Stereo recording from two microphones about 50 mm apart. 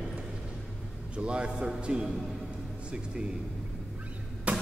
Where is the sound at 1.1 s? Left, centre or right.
Centre.